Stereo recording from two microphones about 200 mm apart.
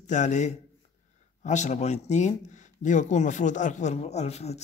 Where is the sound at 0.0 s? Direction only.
35° left (ahead or behind).